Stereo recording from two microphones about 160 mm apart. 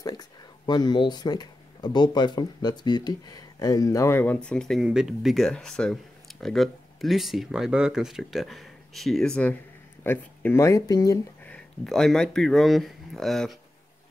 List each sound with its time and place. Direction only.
0.0 s speech: 25° left (ahead or behind)
11.4 s speech: 5° left (ahead or behind)